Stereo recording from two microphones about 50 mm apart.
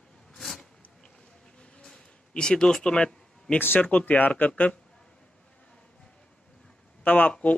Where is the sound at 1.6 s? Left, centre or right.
Centre.